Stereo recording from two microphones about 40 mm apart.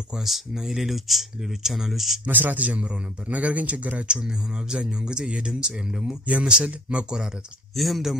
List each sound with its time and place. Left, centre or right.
0.2 s speech: centre
2.2 s a man's voice: right
4.1 s speech: centre
6.2 s a man's voice: right
7.7 s speech: centre